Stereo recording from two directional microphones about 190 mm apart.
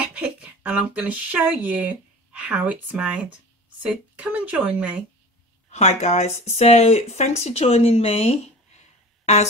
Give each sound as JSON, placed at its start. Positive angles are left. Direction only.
{"t": 0.0, "sound": "speech", "side_deg": -5}
{"t": 5.7, "sound": "speech", "side_deg": 35}